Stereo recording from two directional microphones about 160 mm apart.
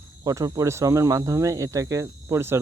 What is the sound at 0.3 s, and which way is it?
Speech, 20° right (ahead or behind).